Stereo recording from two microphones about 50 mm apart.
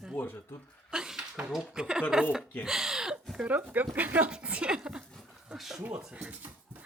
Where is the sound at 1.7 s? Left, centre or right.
Centre.